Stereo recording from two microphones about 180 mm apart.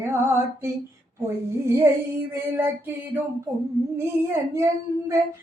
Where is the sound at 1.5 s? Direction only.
15° right (ahead or behind).